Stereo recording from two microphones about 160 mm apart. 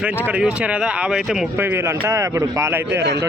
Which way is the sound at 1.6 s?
15° right (ahead or behind).